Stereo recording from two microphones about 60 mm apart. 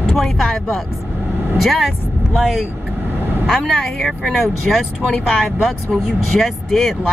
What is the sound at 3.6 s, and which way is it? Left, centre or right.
Speech, centre.